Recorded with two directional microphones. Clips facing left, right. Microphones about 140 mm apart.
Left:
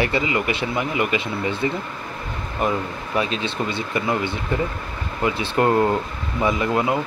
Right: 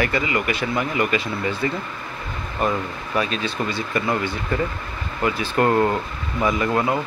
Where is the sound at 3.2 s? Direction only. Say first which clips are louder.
Even; 20° left (ahead or behind).